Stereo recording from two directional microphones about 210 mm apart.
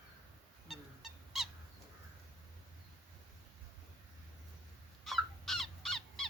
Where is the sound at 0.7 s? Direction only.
Centre (ahead or behind).